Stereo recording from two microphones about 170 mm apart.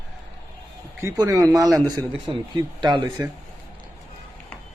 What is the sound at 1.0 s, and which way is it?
Speech, 20° right (ahead or behind).